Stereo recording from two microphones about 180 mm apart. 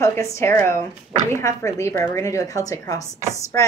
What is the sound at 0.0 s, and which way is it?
Speech, 15° left (ahead or behind).